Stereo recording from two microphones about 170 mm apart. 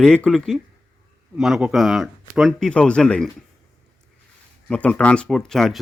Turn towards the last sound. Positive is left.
turn(degrees=0)  # may be behind; listen again after turning